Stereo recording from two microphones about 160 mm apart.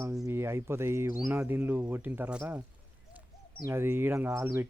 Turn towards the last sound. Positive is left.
turn(degrees=-15)  # may be behind; listen again after turning